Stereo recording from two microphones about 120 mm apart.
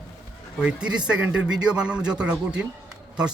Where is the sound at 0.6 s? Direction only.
10° right (ahead or behind).